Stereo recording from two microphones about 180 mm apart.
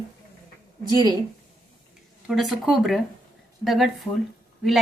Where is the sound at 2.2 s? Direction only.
Centre (ahead or behind).